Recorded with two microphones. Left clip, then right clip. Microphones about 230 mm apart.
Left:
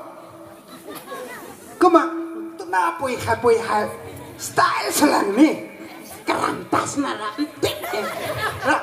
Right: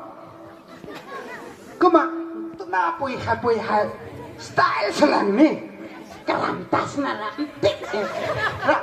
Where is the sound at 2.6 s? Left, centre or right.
Left.